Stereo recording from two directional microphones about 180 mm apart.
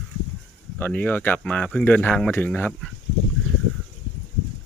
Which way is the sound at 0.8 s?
10° left (ahead or behind).